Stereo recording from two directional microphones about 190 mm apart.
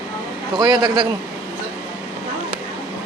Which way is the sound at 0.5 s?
25° right (ahead or behind).